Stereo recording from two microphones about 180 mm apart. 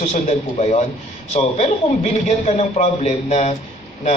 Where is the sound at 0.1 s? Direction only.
40° left (ahead or behind).